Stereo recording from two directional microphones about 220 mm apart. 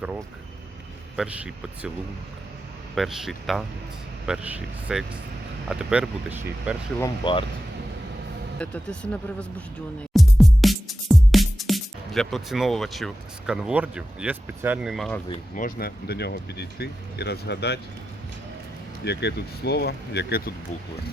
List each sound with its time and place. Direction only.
1.1 s speech: 5° right (ahead or behind)
2.9 s speech: centre (ahead or behind)
7.0 s speech: 20° left (ahead or behind)
8.5 s speech: 5° left (ahead or behind)
10.2 s music: centre (ahead or behind)
15.5 s speech: 40° left (ahead or behind)
19.0 s speech: 50° left (ahead or behind)